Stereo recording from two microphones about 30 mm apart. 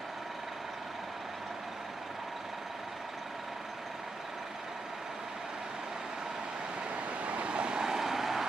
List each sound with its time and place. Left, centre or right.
7.2 s vehicle: right
7.8 s vehicle: centre